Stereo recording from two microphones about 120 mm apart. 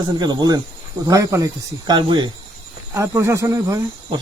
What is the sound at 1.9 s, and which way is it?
Speech, 40° right (ahead or behind).